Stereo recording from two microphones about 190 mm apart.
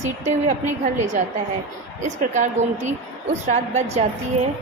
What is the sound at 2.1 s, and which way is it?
A woman's voice, 40° right (ahead or behind).